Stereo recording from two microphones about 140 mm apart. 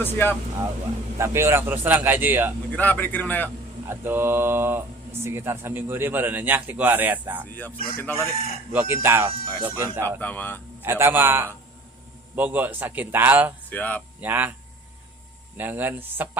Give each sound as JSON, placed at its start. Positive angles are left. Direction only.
{"t": 0.0, "sound": "speech", "side_deg": 15}
{"t": 1.2, "sound": "speech", "side_deg": -20}
{"t": 2.7, "sound": "speech", "side_deg": 10}
{"t": 3.8, "sound": "speech", "side_deg": -15}
{"t": 7.9, "sound": "speech", "side_deg": 15}
{"t": 8.7, "sound": "speech", "side_deg": -15}
{"t": 10.2, "sound": "speech", "side_deg": 10}
{"t": 10.8, "sound": "speech", "side_deg": -15}
{"t": 13.7, "sound": "speech", "side_deg": 10}
{"t": 14.2, "sound": "speech", "side_deg": -15}
{"t": 15.5, "sound": "speech", "side_deg": -15}